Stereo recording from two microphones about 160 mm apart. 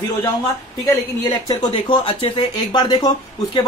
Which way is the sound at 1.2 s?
30° left (ahead or behind).